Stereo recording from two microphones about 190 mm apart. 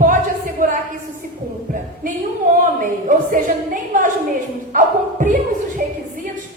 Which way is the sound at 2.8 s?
45° right (ahead or behind).